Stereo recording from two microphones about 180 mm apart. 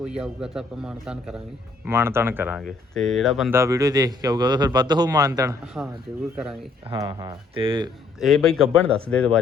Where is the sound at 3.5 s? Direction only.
15° right (ahead or behind).